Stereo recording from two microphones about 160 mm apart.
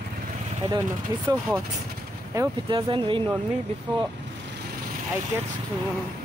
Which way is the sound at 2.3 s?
20° right (ahead or behind).